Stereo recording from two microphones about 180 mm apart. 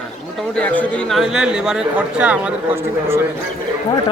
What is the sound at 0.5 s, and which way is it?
A man's voice, 5° left (ahead or behind).